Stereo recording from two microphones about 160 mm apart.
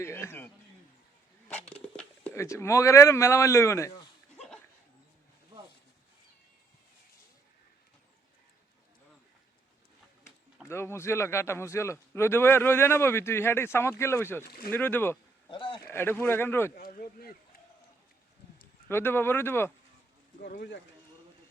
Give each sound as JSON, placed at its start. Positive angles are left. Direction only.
{"t": 0.0, "sound": "a sound", "side_deg": 15}
{"t": 1.7, "sound": "speech", "side_deg": 10}
{"t": 10.7, "sound": "a man's voice", "side_deg": 15}
{"t": 14.4, "sound": "speech", "side_deg": 70}
{"t": 14.7, "sound": "a man's voice", "side_deg": 10}
{"t": 15.4, "sound": "a sound", "side_deg": 30}
{"t": 15.9, "sound": "a man's voice", "side_deg": 15}
{"t": 16.7, "sound": "speech", "side_deg": 70}
{"t": 18.9, "sound": "a man's voice", "side_deg": 15}
{"t": 20.4, "sound": "speech", "side_deg": 80}